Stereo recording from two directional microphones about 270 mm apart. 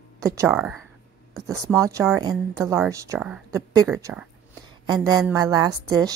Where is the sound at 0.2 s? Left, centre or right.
Centre.